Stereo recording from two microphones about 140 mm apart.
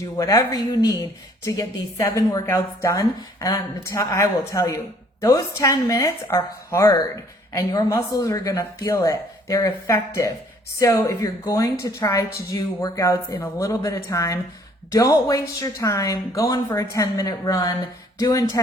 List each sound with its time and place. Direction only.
0.2 s a woman's voice: 25° left (ahead or behind)